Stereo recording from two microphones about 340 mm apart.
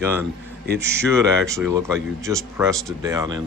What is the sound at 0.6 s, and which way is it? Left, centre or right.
Speech, right.